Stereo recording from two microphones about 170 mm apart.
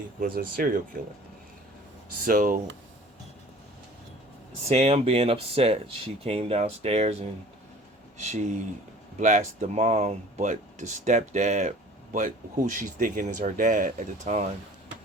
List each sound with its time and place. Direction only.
0.3 s speech: 55° right (ahead or behind)
2.2 s speech: 55° right (ahead or behind)
4.7 s speech: 40° right (ahead or behind)